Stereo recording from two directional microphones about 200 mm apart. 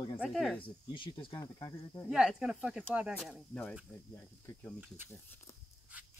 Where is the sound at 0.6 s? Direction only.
25° left (ahead or behind).